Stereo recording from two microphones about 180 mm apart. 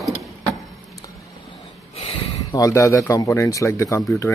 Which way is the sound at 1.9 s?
35° left (ahead or behind).